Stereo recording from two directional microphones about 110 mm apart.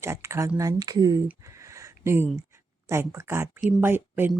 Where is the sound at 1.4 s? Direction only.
30° right (ahead or behind).